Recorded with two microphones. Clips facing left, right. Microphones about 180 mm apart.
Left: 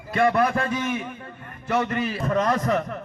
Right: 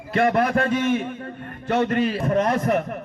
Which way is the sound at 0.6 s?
30° right (ahead or behind).